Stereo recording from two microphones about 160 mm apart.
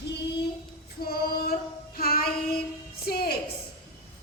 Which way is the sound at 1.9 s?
70° left (ahead or behind).